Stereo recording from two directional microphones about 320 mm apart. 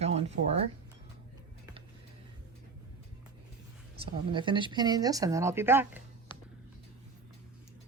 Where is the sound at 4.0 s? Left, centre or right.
Centre.